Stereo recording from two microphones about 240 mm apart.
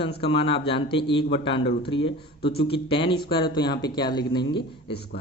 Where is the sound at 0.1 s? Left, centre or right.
Left.